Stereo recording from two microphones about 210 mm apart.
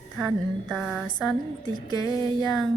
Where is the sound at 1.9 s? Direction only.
20° left (ahead or behind).